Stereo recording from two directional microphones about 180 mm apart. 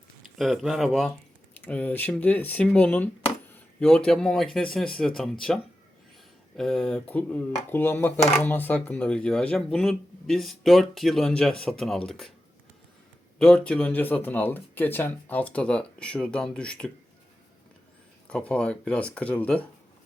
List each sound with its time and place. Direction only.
0.3 s speech: centre (ahead or behind)
6.6 s speech: 5° left (ahead or behind)
13.4 s speech: 5° left (ahead or behind)
18.3 s speech: 5° left (ahead or behind)